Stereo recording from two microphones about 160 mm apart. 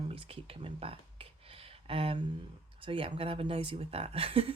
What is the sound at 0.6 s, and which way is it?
Speech, 35° right (ahead or behind).